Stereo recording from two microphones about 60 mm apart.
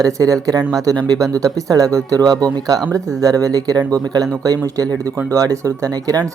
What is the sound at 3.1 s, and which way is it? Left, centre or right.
Speech, right.